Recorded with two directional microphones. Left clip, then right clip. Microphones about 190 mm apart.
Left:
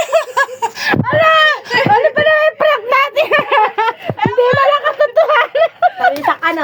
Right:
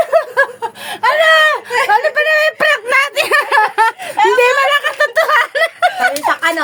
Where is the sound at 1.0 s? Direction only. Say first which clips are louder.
Right 1 dB; 15° right (ahead or behind).